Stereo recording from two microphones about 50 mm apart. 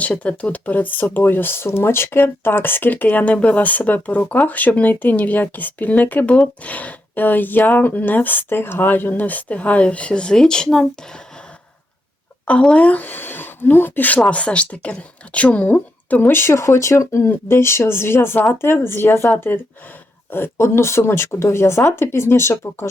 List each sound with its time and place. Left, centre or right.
0.2 s speech: left; by 10.8 s centre
12.7 s speech: left
14.2 s a woman's voice: left
16.2 s speech: left
20.3 s speech: left